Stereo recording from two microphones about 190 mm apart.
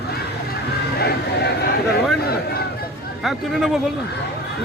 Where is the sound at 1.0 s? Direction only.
60° left (ahead or behind).